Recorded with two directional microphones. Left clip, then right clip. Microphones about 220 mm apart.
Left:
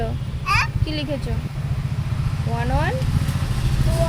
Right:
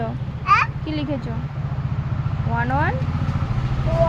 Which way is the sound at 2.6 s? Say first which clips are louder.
Right 3 dB; 25° left (ahead or behind).